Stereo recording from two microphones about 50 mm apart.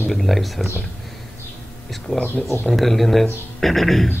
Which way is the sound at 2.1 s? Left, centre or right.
Left.